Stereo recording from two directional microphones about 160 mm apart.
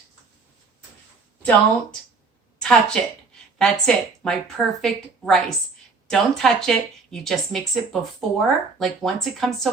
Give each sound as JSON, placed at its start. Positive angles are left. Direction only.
{"t": 1.4, "sound": "a woman's voice", "side_deg": 10}